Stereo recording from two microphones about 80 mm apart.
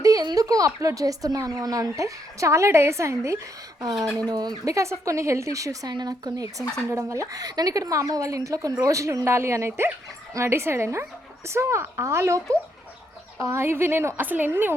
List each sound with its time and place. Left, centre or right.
0.0 s a sound: right
0.3 s speech: right
3.8 s speech: right
4.7 s a woman's voice: right
5.9 s a woman's voice: right